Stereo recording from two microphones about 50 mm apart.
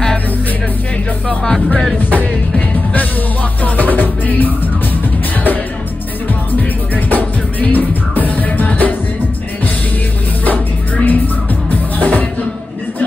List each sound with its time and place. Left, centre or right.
3.6 s music: left
7.1 s music: left
10.4 s music: left